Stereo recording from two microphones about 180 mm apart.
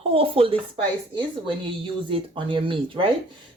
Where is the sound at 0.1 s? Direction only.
30° right (ahead or behind).